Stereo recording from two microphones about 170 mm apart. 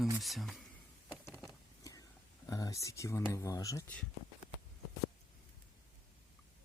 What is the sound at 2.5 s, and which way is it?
Speech, 20° left (ahead or behind).